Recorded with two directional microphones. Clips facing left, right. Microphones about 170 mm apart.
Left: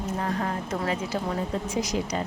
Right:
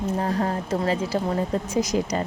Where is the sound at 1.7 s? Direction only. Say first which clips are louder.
Right 5 dB; 45° right (ahead or behind).